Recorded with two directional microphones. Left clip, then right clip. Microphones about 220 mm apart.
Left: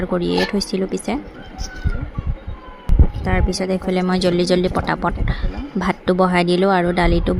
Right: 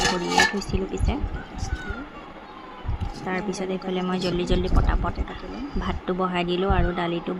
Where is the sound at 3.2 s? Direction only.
20° left (ahead or behind).